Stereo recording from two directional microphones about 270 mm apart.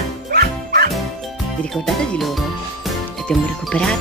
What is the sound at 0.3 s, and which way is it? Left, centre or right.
Bow-wow, right.